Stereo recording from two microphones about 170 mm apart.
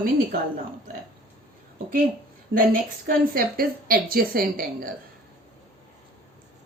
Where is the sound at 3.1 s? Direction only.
60° right (ahead or behind).